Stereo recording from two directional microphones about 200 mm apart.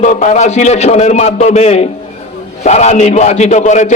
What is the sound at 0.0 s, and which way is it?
A man's voice, 40° left (ahead or behind).